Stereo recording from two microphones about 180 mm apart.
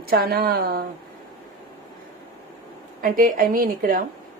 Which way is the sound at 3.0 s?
50° right (ahead or behind).